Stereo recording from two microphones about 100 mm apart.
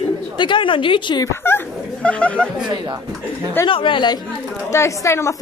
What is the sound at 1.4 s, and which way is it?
Dog, 25° left (ahead or behind).